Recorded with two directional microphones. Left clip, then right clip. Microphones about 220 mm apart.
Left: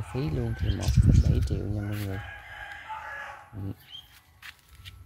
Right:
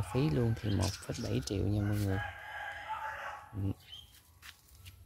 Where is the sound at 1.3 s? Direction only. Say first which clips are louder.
Left 1 dB; 10° right (ahead or behind).